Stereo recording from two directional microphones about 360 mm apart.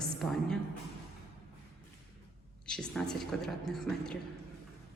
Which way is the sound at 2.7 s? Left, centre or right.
Centre.